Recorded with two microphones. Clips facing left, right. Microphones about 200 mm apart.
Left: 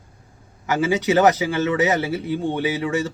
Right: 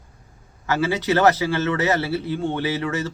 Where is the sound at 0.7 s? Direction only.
15° left (ahead or behind).